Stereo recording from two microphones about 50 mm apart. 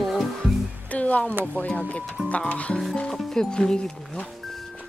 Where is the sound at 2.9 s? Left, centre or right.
Centre.